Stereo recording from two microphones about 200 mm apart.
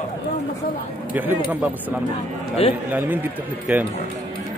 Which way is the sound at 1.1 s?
10° right (ahead or behind).